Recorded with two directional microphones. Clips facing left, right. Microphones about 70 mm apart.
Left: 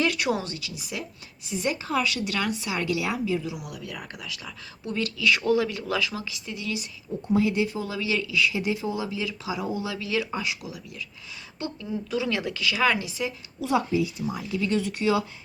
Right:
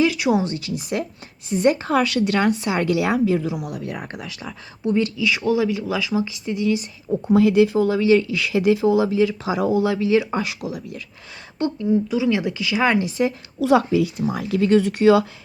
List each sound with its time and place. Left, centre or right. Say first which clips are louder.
0.0 s a sound: right 6 dB; centre
0.4 s speech: right 10 dB; right
5.2 s speech: left 2 dB; centre
6.4 s speech: right 11 dB; right
7.3 s speech: right 8 dB; right
7.9 s speech: right 12 dB; right
8.4 s speech: right 7 dB; right
9.0 s speech: right 11 dB; right
9.6 s speech: right 12 dB; right
10.0 s speech: right 10 dB; right
10.3 s speech: right 6 dB; right
11.9 s speech: right 8 dB; centre
12.7 s speech: right 6 dB; right
13.6 s speech: right 7 dB; right